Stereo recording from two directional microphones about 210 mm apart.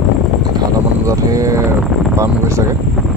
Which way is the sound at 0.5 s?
20° right (ahead or behind).